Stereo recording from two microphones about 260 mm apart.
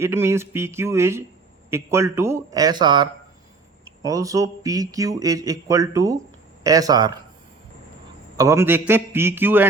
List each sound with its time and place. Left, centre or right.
0.0 s speech: centre
8.4 s speech: centre